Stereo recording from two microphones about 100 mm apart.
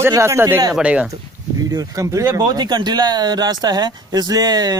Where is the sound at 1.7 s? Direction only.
35° right (ahead or behind).